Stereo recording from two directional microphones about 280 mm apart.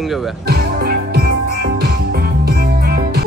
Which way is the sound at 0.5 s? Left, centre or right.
Right.